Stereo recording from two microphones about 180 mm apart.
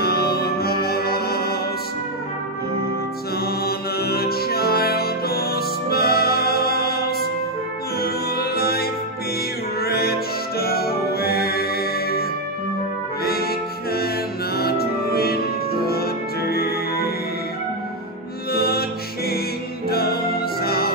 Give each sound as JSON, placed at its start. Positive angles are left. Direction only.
{"t": 0.0, "sound": "music", "side_deg": 60}
{"t": 3.4, "sound": "music", "side_deg": 60}
{"t": 18.5, "sound": "music", "side_deg": 60}